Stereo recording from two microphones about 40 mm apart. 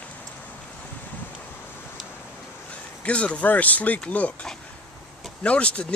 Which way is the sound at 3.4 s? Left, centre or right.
Left.